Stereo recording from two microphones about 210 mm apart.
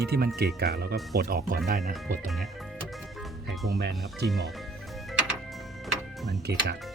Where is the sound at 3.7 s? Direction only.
50° right (ahead or behind).